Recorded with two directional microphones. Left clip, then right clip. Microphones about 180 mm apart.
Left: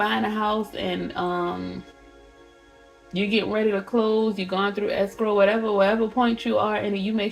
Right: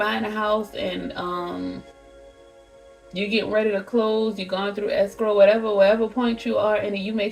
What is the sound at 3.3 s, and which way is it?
Speech, 40° left (ahead or behind).